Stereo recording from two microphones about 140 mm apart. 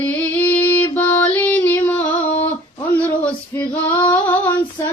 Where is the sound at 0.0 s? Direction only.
15° left (ahead or behind).